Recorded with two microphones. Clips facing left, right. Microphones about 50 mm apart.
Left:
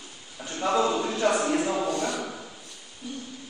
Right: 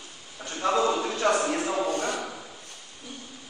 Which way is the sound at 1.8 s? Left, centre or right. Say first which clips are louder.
Even; right.